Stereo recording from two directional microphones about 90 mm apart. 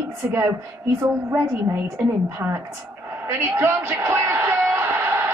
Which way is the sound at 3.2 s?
30° right (ahead or behind).